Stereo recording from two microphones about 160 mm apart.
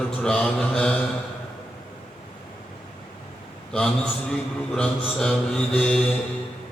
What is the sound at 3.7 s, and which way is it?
A man's voice, 5° left (ahead or behind).